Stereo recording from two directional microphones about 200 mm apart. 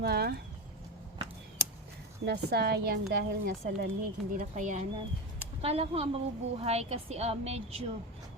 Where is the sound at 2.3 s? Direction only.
55° right (ahead or behind).